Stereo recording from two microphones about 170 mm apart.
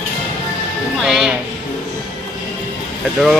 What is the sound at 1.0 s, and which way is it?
Music, centre (ahead or behind).